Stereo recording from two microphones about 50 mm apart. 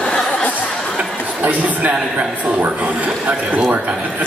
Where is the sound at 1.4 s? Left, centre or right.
Right.